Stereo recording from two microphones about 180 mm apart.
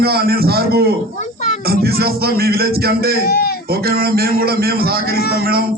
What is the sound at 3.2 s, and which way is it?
Speech, 60° left (ahead or behind).